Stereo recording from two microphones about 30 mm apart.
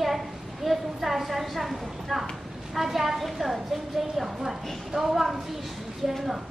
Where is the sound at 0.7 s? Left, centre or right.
Centre.